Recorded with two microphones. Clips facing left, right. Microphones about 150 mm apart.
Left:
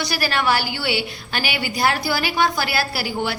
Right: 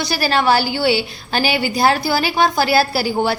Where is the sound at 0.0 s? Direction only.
30° right (ahead or behind).